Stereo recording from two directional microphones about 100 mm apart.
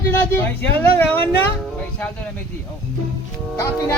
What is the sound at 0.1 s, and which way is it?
Speech, 20° left (ahead or behind).